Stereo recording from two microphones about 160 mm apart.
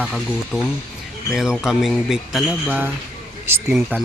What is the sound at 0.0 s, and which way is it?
Speech, 5° left (ahead or behind).